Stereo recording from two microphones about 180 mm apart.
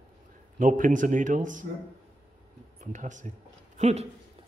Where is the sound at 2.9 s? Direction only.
45° right (ahead or behind).